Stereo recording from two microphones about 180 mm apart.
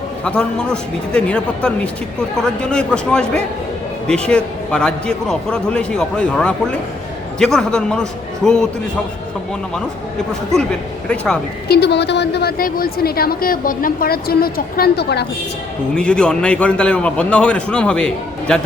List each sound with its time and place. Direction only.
0.3 s a man's voice: 5° left (ahead or behind)
10.5 s a man's voice: 5° left (ahead or behind)
11.7 s a woman's voice: 70° left (ahead or behind)
16.0 s a man's voice: 5° left (ahead or behind)